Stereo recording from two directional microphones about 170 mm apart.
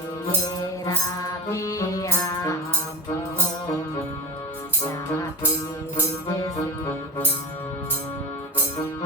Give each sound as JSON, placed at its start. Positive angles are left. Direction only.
{"t": 0.9, "sound": "music", "side_deg": 20}